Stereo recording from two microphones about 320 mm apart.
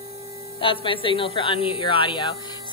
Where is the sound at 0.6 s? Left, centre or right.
Centre.